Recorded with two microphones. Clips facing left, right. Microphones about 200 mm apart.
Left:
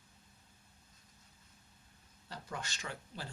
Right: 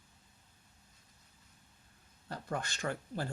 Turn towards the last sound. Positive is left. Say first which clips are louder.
# right 8 dB
turn(degrees=-50)  # may be behind; listen again after turning